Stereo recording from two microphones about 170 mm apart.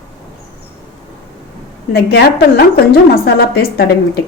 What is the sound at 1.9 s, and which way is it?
A woman's voice, 65° left (ahead or behind).